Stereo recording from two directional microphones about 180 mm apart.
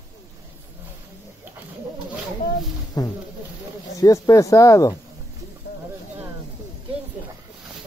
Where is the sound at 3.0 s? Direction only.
20° left (ahead or behind).